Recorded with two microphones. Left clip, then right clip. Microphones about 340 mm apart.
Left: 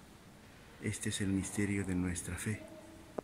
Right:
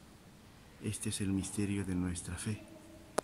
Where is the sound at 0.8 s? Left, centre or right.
Centre.